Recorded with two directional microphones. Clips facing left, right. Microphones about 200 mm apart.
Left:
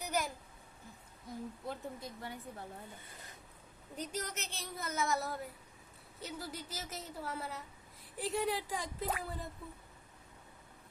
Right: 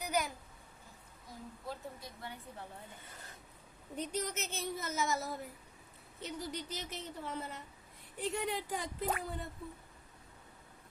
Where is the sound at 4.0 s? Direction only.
Centre (ahead or behind).